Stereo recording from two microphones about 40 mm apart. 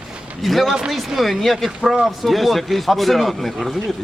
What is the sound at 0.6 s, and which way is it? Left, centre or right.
Speech, centre.